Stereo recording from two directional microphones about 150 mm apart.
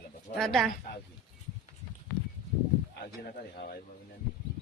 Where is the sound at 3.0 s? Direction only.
85° left.